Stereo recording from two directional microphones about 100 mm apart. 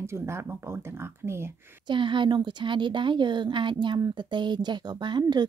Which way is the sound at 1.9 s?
55° right (ahead or behind).